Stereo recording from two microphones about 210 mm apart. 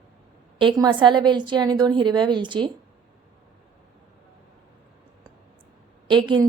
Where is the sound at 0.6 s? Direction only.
20° right (ahead or behind).